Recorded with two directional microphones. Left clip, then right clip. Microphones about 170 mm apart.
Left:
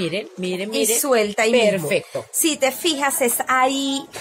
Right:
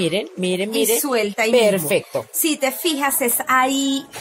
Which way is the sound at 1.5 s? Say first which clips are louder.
Right 4 dB; 40° right (ahead or behind).